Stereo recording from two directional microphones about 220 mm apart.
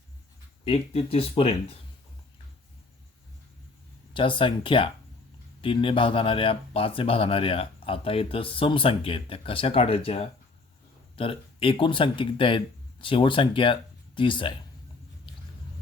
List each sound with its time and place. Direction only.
0.6 s speech: 25° left (ahead or behind)
4.1 s speech: 25° left (ahead or behind)